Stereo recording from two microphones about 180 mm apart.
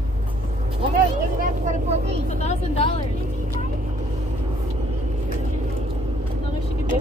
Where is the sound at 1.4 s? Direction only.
45° right (ahead or behind).